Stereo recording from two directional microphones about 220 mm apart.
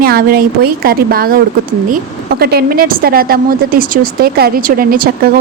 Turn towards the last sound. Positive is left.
turn(degrees=-40)  # may be behind; listen again after turning